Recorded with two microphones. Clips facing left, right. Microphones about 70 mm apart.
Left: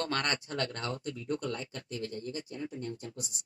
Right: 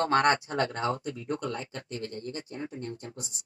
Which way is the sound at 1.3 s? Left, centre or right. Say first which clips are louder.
Right 2 dB; right.